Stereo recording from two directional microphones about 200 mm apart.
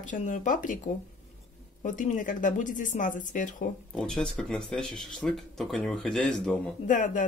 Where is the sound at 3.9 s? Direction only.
5° left (ahead or behind).